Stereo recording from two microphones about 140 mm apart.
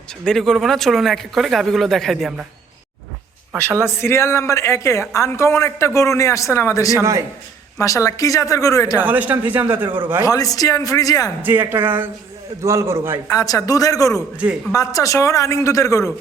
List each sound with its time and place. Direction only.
0.3 s speech: centre (ahead or behind)
4.0 s a man's voice: 20° left (ahead or behind)
7.0 s a man's voice: 20° right (ahead or behind)
7.8 s a man's voice: 20° left (ahead or behind)
9.0 s a man's voice: 10° right (ahead or behind)
10.2 s a man's voice: 25° left (ahead or behind)
11.4 s a man's voice: 15° right (ahead or behind)
13.3 s a man's voice: 25° left (ahead or behind)